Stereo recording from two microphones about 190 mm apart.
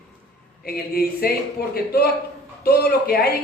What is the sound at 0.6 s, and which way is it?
Speech, 55° left (ahead or behind).